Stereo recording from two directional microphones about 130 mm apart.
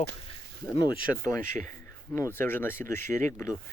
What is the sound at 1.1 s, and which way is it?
Speech, 20° left (ahead or behind).